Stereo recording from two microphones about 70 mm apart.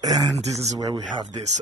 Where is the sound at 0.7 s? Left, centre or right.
Right.